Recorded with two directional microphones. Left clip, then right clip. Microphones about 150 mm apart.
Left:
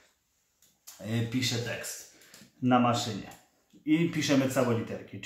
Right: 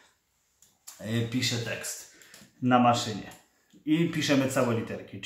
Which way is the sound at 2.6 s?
10° right (ahead or behind).